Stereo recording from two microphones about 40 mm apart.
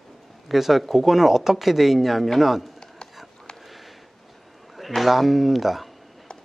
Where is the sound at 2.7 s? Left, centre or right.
Centre.